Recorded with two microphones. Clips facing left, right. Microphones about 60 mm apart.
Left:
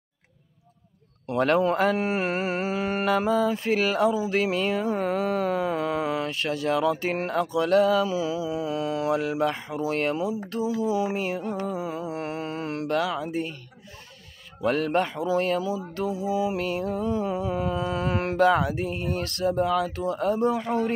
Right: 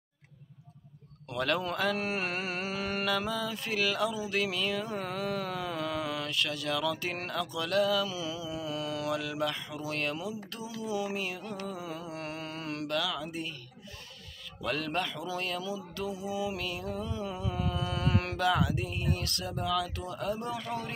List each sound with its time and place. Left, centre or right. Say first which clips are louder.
1.2 s speech: left 9 dB; left
14.6 s speech: left 9 dB; left